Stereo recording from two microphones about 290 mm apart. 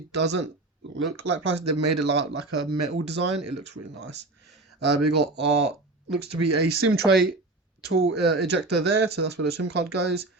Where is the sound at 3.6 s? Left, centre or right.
Right.